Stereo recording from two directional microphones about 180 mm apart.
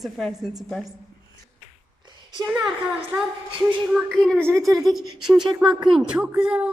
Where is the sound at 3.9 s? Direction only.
5° left (ahead or behind).